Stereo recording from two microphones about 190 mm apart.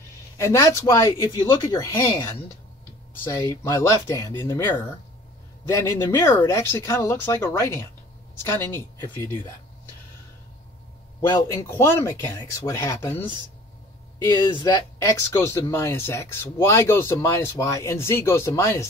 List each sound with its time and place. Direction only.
0.4 s speech: 15° left (ahead or behind)
11.1 s speech: 15° left (ahead or behind)
14.2 s speech: 25° left (ahead or behind)